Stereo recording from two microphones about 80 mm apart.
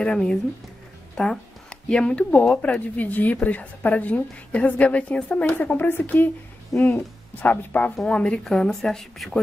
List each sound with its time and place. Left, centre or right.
0.0 s a woman's voice: centre
6.7 s speech: centre
7.3 s a woman's voice: left
7.9 s a woman's voice: centre